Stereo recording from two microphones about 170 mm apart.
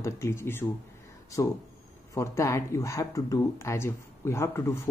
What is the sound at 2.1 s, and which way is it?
Speech, 15° left (ahead or behind).